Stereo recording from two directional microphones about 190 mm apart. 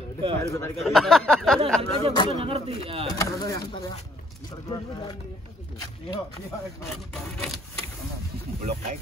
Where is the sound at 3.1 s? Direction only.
15° left (ahead or behind).